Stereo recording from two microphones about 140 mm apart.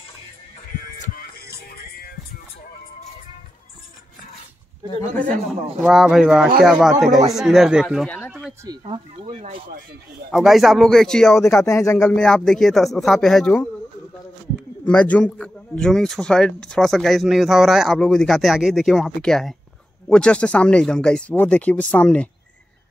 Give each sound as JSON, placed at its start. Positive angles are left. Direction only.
{"t": 5.8, "sound": "a man's voice", "side_deg": -5}
{"t": 8.3, "sound": "a sound", "side_deg": -5}
{"t": 8.8, "sound": "speech", "side_deg": -40}
{"t": 9.4, "sound": "speech", "side_deg": -90}
{"t": 10.3, "sound": "a man's voice", "side_deg": 0}
{"t": 11.5, "sound": "speech", "side_deg": 20}
{"t": 11.9, "sound": "a man's voice", "side_deg": 5}
{"t": 14.9, "sound": "a man's voice", "side_deg": 10}